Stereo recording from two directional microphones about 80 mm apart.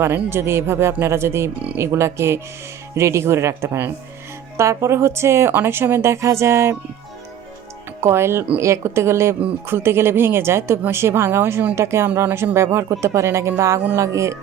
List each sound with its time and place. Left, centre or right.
0.0 s speech: right
8.0 s speech: right